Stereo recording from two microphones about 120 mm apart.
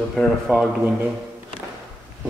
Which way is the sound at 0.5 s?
10° right (ahead or behind).